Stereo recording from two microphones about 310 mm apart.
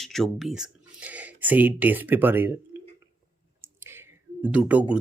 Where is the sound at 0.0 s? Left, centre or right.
Centre.